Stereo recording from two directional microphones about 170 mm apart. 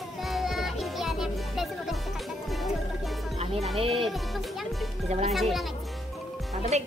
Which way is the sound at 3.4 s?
35° right (ahead or behind).